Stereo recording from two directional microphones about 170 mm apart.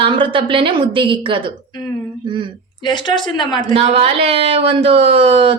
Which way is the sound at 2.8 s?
25° left (ahead or behind).